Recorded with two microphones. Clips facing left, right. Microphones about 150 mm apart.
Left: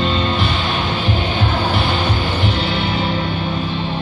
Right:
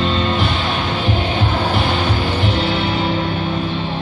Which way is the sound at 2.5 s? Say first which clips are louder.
Right 2 dB; 25° right (ahead or behind).